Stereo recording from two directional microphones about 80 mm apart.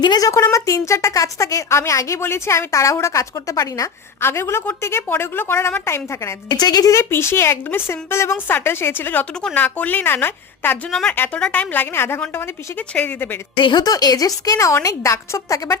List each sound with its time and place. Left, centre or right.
0.0 s a woman's voice: left
0.5 s a woman's voice: left
4.2 s a woman's voice: left
6.6 s a woman's voice: left
6.9 s a woman's voice: left
11.3 s a woman's voice: centre
13.6 s a woman's voice: left
13.8 s a woman's voice: left